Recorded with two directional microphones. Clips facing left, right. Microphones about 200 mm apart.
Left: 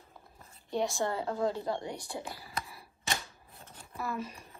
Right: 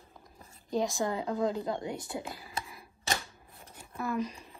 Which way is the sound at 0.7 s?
Centre (ahead or behind).